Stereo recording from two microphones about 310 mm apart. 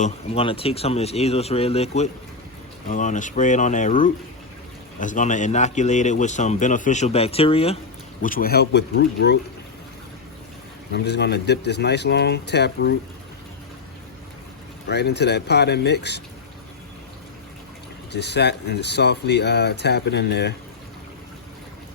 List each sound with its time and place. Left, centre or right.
0.0 s speech: centre; by 9.4 s left
10.9 s speech: left
14.8 s speech: left
18.1 s speech: left